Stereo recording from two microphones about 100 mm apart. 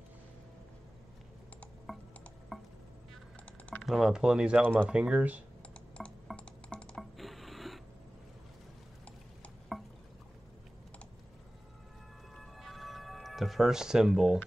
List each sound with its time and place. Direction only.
2.5 s chopping: centre (ahead or behind)
3.8 s speech: centre (ahead or behind)
6.0 s a sound: centre (ahead or behind)
6.3 s music: 10° left (ahead or behind)
7.0 s a sound: centre (ahead or behind)
12.4 s music: centre (ahead or behind)